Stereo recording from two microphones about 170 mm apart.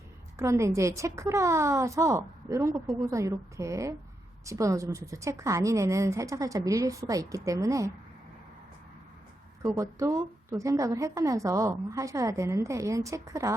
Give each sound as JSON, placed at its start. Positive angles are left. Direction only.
{"t": 0.3, "sound": "a woman's voice", "side_deg": -15}
{"t": 2.7, "sound": "speech", "side_deg": 0}
{"t": 3.1, "sound": "a woman's voice", "side_deg": -20}
{"t": 9.6, "sound": "a woman's voice", "side_deg": -20}